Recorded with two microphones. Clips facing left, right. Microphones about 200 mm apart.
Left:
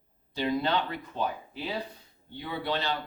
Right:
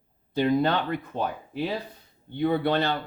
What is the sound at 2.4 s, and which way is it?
Speech, 55° right (ahead or behind).